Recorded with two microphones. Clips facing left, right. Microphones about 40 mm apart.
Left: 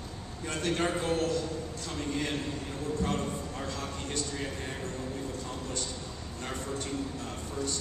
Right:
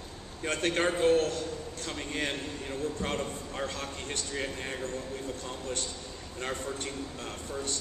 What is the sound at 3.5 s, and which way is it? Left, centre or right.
Speech, right.